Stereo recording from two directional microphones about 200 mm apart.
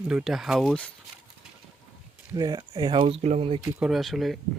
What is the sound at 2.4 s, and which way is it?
Speech, 20° right (ahead or behind).